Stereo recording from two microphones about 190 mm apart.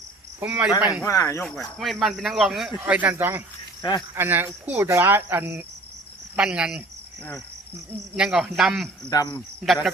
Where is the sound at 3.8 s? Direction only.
20° left (ahead or behind).